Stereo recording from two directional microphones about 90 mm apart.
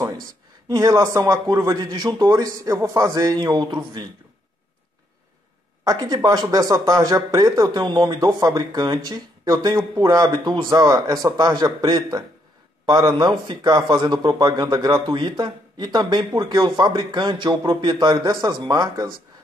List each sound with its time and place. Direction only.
0.7 s a man's voice: 40° right (ahead or behind); by 4.1 s 55° right (ahead or behind)
5.9 s speech: 50° right (ahead or behind)